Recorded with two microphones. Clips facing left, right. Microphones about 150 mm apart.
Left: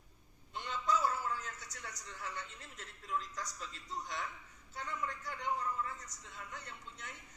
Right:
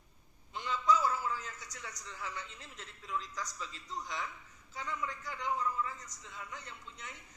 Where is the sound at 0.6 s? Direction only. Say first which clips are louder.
Right 4 dB; 55° left (ahead or behind).